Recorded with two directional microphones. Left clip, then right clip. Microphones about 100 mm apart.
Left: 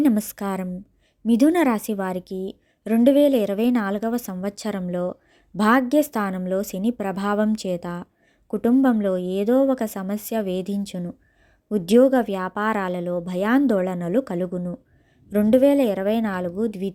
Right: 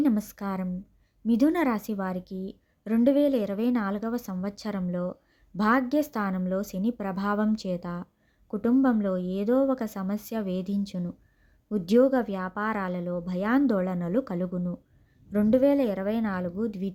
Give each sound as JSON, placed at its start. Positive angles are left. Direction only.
{"t": 0.0, "sound": "a woman's voice", "side_deg": 35}